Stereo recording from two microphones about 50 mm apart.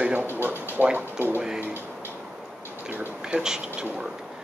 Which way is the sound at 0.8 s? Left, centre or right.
Right.